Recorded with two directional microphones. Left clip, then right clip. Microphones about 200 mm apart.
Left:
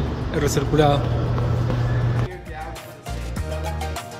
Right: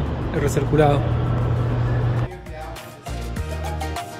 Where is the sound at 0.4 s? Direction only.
Centre (ahead or behind).